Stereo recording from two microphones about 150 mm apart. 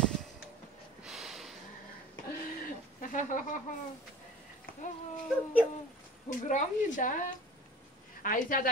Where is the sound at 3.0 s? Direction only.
60° left (ahead or behind).